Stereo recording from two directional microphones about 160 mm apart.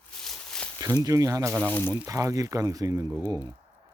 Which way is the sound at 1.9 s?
20° right (ahead or behind).